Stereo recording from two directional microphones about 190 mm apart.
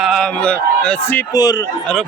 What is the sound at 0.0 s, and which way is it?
A man's voice, 5° left (ahead or behind).